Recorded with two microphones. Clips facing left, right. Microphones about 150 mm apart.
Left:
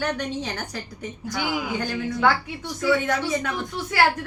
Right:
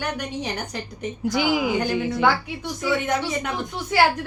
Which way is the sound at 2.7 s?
20° right (ahead or behind).